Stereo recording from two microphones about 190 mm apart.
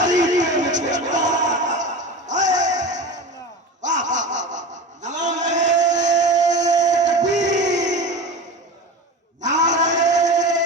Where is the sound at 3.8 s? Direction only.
40° right (ahead or behind).